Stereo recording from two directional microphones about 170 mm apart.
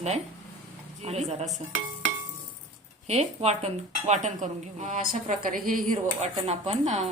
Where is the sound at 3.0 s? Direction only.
40° right (ahead or behind).